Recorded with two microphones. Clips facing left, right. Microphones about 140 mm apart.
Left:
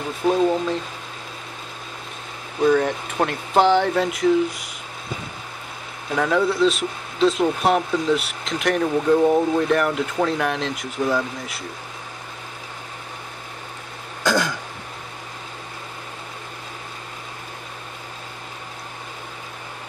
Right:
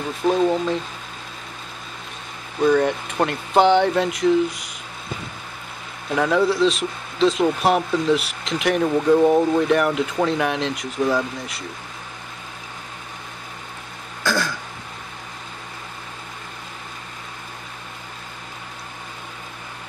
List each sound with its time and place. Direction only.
0.3 s speech: centre (ahead or behind)
2.6 s speech: centre (ahead or behind)
6.1 s speech: centre (ahead or behind)
14.2 s throat clearing: 20° left (ahead or behind)